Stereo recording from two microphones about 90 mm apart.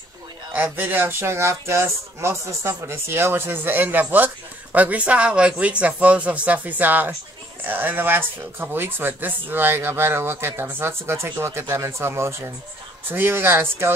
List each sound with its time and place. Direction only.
0.5 s speech: 20° right (ahead or behind)